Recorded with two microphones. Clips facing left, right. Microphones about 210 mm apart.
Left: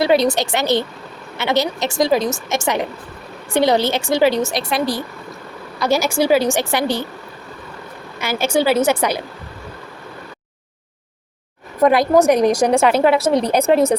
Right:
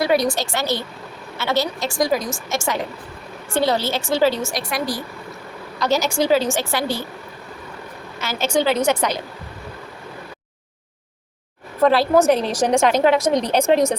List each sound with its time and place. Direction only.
0.0 s a woman's voice: 25° left (ahead or behind)
5.8 s a woman's voice: 10° left (ahead or behind)
8.2 s a woman's voice: 10° left (ahead or behind)
11.8 s a woman's voice: 15° left (ahead or behind)